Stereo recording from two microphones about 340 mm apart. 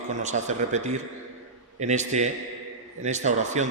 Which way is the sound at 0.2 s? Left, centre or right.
Right.